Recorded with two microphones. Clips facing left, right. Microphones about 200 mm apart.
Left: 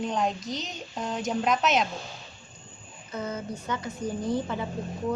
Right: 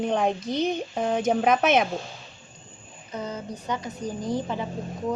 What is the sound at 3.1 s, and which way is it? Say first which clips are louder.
A woman's voice: even; 15° right (ahead or behind).